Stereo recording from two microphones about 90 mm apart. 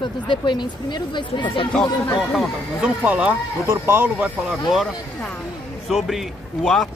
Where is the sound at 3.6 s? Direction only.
30° right (ahead or behind).